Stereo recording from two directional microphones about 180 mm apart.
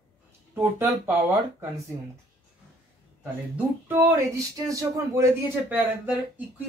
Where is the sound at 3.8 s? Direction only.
10° right (ahead or behind).